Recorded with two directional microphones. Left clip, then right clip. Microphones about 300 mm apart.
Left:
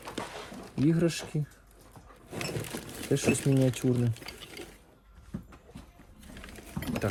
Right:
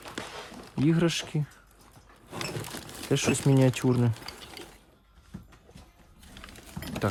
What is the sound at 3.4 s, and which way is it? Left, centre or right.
Speech, right.